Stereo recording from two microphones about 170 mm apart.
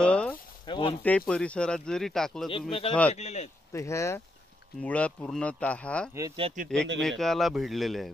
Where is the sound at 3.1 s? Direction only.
40° left (ahead or behind).